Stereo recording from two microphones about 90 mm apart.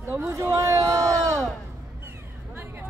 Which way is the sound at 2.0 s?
25° right (ahead or behind).